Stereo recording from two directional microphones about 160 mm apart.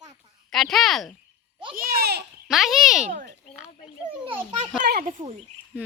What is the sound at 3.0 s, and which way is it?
Speech, 50° right (ahead or behind).